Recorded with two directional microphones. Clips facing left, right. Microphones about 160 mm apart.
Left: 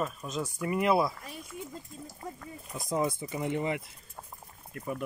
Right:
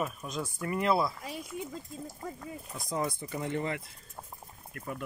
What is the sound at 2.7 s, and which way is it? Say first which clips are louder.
Speech: left 4 dB; 20° left (ahead or behind).